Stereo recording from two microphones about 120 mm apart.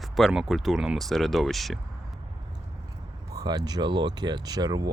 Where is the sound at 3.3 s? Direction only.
35° right (ahead or behind).